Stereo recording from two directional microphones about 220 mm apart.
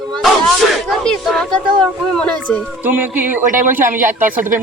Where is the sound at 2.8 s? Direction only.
10° right (ahead or behind).